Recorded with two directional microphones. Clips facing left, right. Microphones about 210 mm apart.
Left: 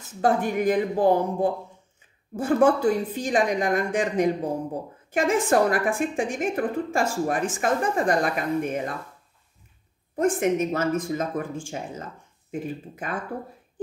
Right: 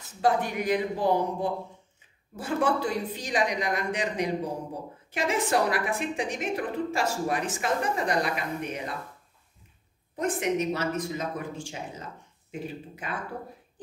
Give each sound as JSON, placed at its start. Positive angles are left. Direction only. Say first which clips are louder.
{"t": 0.2, "sound": "a woman's voice", "louder": "left 4 dB", "side_deg": 50}
{"t": 10.1, "sound": "a woman's voice", "louder": "left 5 dB", "side_deg": 50}